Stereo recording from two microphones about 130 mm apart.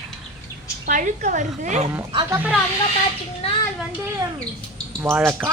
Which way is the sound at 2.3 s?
10° right (ahead or behind).